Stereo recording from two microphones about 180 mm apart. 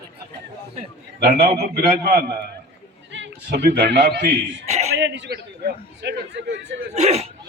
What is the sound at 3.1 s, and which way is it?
A man's voice, 75° right (ahead or behind).